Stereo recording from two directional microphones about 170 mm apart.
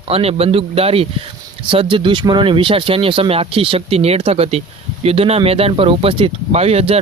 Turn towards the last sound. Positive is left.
turn(degrees=-35)  # may be behind; listen again after turning